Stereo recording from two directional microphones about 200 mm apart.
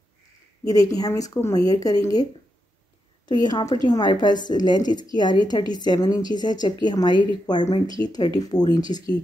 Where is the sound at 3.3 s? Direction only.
20° left (ahead or behind).